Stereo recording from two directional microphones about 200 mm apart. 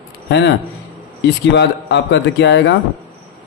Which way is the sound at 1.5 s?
60° left (ahead or behind).